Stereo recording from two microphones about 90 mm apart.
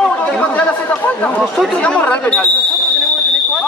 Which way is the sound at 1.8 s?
15° left (ahead or behind).